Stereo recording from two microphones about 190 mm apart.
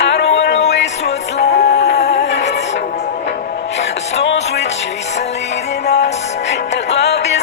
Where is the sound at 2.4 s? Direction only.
35° left (ahead or behind).